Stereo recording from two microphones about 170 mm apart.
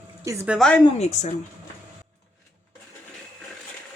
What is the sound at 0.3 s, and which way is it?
Speech, 15° right (ahead or behind).